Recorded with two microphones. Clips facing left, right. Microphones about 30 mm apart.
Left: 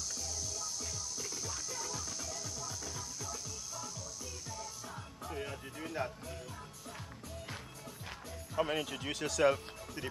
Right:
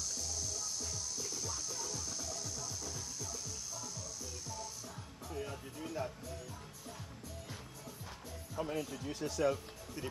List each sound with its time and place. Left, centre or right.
0.1 s music: centre
4.8 s music: left
8.5 s speech: left